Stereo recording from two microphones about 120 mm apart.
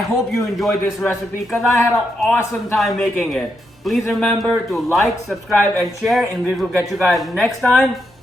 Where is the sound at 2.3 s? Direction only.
20° left (ahead or behind).